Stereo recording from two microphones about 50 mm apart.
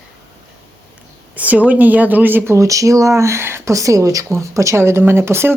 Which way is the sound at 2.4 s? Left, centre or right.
Right.